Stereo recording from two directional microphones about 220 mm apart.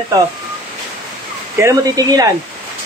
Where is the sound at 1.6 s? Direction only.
15° right (ahead or behind).